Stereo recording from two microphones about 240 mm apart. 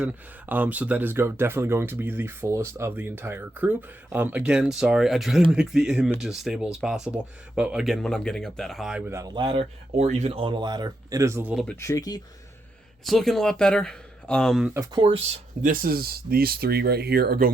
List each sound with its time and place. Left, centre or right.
0.0 s speech: centre
11.6 s speech: centre
13.1 s speech: centre
14.7 s speech: centre
15.6 s speech: right